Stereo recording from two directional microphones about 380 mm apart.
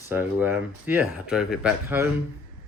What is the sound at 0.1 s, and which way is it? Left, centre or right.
Speech, centre.